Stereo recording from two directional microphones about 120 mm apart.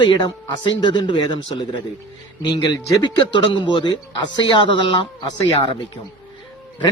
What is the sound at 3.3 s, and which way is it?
A man's voice, 45° left (ahead or behind).